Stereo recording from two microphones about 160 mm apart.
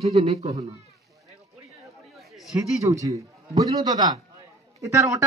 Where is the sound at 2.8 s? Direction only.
20° right (ahead or behind).